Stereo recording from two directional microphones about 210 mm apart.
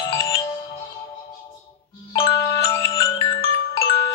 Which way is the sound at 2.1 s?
15° left (ahead or behind).